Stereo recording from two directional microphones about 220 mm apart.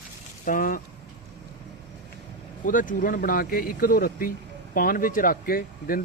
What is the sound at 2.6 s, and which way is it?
Speech, 35° left (ahead or behind).